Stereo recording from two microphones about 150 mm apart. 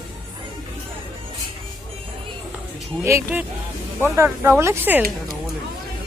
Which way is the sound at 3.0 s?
15° right (ahead or behind).